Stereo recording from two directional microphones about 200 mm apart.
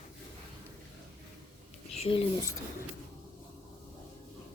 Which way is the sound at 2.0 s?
25° left (ahead or behind).